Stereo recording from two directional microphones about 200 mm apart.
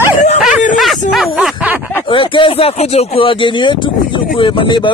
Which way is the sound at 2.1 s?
25° left (ahead or behind).